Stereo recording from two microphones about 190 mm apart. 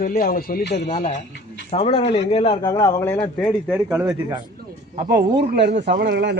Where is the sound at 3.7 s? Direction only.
5° right (ahead or behind).